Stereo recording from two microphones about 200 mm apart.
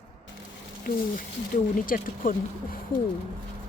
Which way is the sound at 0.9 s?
45° left (ahead or behind).